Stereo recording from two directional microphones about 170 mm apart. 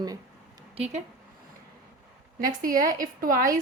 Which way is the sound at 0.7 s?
40° right (ahead or behind).